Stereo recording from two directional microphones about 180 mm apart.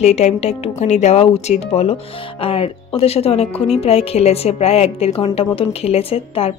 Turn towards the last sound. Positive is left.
turn(degrees=35)  # may be behind; listen again after turning